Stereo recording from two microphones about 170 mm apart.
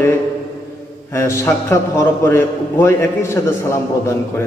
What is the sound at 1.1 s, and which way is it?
A man's voice, 15° left (ahead or behind).